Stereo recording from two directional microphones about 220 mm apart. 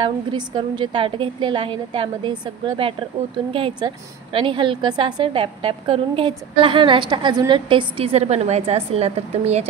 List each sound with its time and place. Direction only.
0.3 s a woman's voice: 20° right (ahead or behind)